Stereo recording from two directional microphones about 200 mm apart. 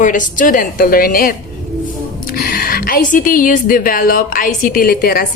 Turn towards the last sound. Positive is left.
turn(degrees=50)  # may be behind; listen again after turning